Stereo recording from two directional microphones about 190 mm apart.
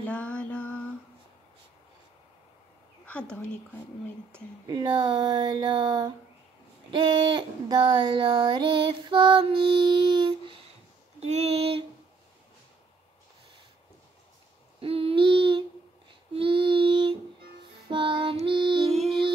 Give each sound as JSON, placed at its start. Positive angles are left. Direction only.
{"t": 0.0, "sound": "mantra", "side_deg": 5}
{"t": 3.1, "sound": "a woman's voice", "side_deg": 5}
{"t": 4.3, "sound": "child singing", "side_deg": -20}
{"t": 11.1, "sound": "a sound", "side_deg": -35}
{"t": 14.8, "sound": "a sound", "side_deg": -30}
{"t": 16.3, "sound": "child singing", "side_deg": -25}